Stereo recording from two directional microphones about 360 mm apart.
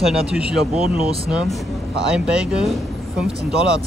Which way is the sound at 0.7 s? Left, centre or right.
Centre.